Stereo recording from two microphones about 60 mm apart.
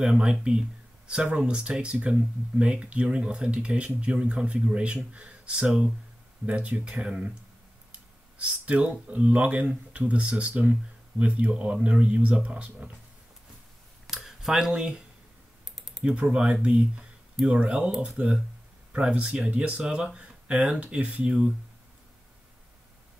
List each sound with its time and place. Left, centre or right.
0.0 s speech: centre
8.4 s speech: right
14.1 s a sound: centre
14.7 s speech: centre
16.0 s speech: centre